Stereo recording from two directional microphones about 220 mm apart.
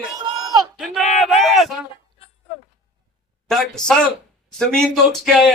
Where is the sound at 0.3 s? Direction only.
15° right (ahead or behind).